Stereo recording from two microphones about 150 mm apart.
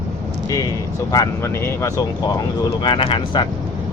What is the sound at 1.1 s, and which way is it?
Speech, 20° left (ahead or behind).